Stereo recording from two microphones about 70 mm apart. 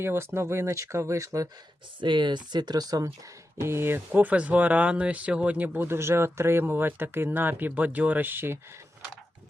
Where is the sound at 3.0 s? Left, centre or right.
Right.